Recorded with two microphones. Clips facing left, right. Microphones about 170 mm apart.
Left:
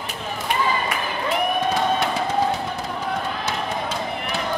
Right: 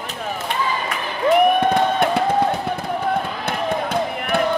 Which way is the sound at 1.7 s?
55° right (ahead or behind).